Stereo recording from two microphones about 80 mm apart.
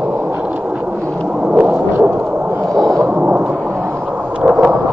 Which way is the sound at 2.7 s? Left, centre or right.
Right.